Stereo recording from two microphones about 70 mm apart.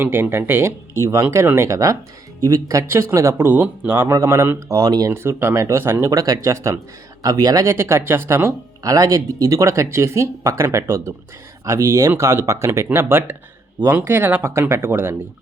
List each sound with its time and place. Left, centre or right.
0.0 s speech: right
3.4 s speech: right
4.1 s speech: right
4.8 s speech: right
5.1 s speech: right
6.1 s speech: right
7.2 s speech: right
7.6 s speech: right
8.8 s speech: right